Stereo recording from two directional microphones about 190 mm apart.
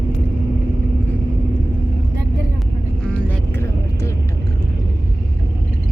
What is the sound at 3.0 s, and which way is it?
Vehicle, 5° left (ahead or behind).